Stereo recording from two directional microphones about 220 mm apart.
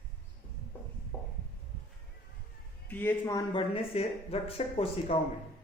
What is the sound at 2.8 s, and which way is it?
Speech, 10° left (ahead or behind).